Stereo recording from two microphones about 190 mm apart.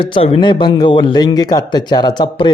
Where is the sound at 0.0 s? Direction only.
30° left (ahead or behind).